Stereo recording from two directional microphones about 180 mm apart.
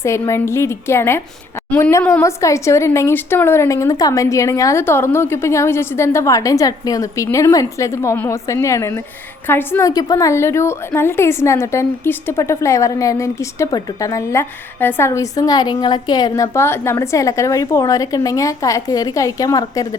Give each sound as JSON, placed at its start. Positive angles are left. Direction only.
{"t": 0.0, "sound": "a woman's voice", "side_deg": 15}